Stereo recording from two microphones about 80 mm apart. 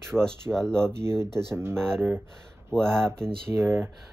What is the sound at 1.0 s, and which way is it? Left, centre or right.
Speech, right.